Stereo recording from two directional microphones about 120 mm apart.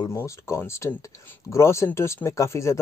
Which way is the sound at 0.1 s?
25° left (ahead or behind).